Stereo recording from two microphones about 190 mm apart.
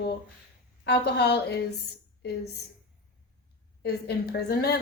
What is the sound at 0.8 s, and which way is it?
Speech, 60° left (ahead or behind).